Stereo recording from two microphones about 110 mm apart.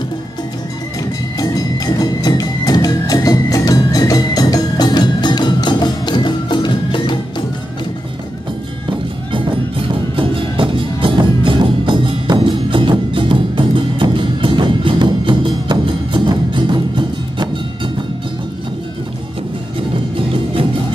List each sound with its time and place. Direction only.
1.4 s music: 35° left (ahead or behind)
10.1 s music: 50° right (ahead or behind)